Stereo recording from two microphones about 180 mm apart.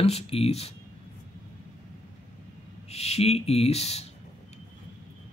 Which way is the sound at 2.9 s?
35° left (ahead or behind).